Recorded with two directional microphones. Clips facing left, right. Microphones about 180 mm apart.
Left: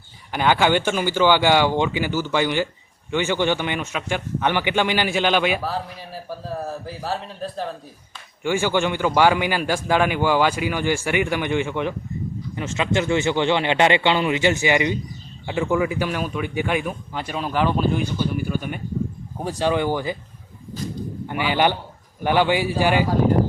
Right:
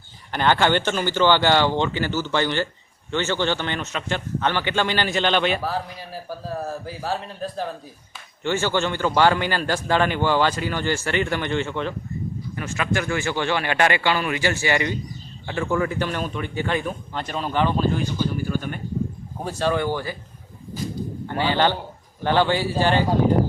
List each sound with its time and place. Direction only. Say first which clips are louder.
0.3 s a man's voice: left 1 dB; 10° left (ahead or behind)
8.4 s a man's voice: left 2 dB; 10° left (ahead or behind)
19.5 s a man's voice: left 2 dB; 15° left (ahead or behind)
21.2 s a man's voice: left 1 dB; 15° left (ahead or behind)